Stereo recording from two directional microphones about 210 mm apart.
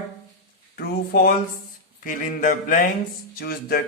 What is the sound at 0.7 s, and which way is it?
Speech, 45° left (ahead or behind).